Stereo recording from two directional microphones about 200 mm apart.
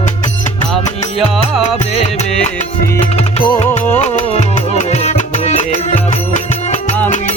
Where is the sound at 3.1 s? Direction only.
25° left (ahead or behind).